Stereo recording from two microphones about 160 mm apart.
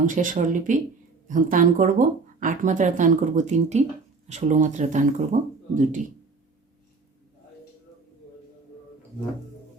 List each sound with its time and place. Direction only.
0.0 s speech: 55° right (ahead or behind)